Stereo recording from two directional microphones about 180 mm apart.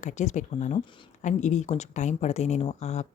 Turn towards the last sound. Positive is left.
turn(degrees=40)  # may be behind; listen again after turning